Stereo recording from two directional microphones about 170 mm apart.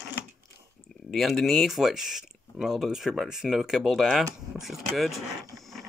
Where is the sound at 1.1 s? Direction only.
Centre (ahead or behind).